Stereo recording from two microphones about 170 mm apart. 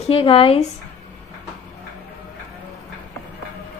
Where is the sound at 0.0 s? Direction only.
35° left (ahead or behind).